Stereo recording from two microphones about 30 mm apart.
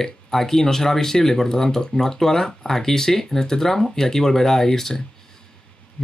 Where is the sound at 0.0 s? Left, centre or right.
Centre.